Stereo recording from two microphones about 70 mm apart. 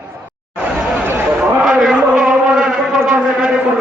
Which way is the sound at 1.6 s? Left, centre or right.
Centre.